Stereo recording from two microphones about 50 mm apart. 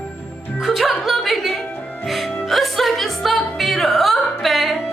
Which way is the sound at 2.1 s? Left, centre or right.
Centre.